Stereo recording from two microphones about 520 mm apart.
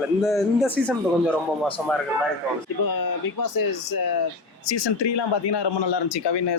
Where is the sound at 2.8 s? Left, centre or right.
Left.